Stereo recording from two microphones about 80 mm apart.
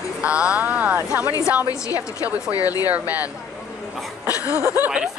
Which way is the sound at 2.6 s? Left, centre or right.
Left.